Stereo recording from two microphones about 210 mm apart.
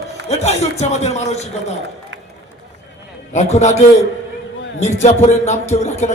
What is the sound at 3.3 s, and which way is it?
A man's voice, 35° left (ahead or behind).